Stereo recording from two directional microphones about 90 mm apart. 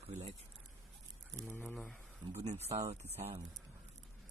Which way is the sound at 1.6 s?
5° left (ahead or behind).